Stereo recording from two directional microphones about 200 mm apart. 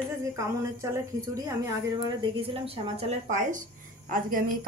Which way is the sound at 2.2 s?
30° right (ahead or behind).